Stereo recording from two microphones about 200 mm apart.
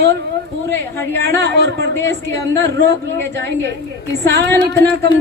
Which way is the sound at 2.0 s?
15° left (ahead or behind).